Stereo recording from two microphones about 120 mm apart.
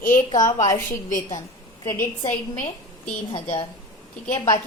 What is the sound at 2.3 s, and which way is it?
Speech, 90° left.